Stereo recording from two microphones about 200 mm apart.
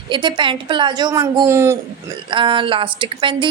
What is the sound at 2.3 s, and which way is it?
A woman's voice, 25° right (ahead or behind).